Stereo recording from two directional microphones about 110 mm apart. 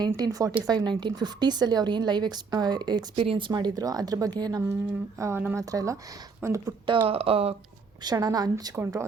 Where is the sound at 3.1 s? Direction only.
55° right (ahead or behind).